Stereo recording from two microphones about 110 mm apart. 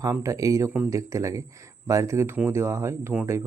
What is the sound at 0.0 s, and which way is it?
Speech, 30° right (ahead or behind).